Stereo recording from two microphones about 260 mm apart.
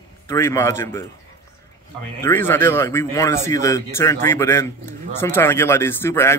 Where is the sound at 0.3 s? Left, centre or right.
Centre.